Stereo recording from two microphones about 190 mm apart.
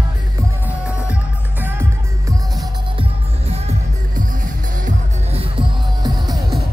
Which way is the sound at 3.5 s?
40° right (ahead or behind).